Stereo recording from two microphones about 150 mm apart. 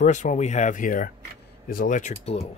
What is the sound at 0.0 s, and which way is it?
Speech, 55° left (ahead or behind).